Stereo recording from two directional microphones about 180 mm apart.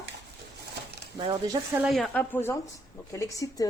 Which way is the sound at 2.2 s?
10° left (ahead or behind).